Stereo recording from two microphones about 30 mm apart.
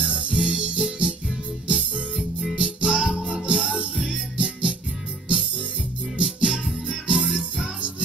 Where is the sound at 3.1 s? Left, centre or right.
Centre.